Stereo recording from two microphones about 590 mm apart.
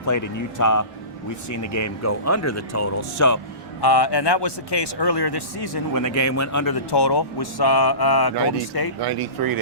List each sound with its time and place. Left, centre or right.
0.0 s speech: left
6.9 s speech: left
9.0 s speech: right